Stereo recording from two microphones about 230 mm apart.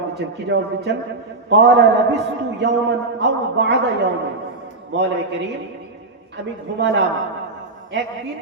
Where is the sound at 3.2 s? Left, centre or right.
Right.